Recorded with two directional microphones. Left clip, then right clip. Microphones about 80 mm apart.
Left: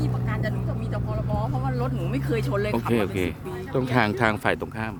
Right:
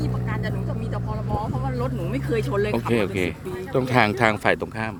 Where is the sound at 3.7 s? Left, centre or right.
Centre.